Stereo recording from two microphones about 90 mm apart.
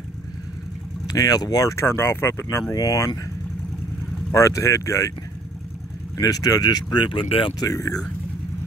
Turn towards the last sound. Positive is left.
turn(degrees=40)  # may be behind; listen again after turning